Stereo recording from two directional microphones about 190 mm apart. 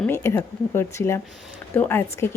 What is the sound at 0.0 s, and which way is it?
Speech, 10° left (ahead or behind).